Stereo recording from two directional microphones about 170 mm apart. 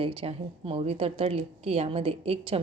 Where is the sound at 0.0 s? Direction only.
35° right (ahead or behind).